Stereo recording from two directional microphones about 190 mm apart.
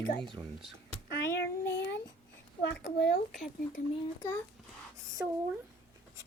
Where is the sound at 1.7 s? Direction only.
65° left (ahead or behind).